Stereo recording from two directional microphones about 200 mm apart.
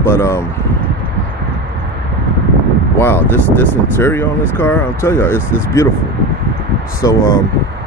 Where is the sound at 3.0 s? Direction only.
10° left (ahead or behind).